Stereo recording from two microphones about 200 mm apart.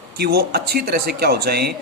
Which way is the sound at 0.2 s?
50° right (ahead or behind).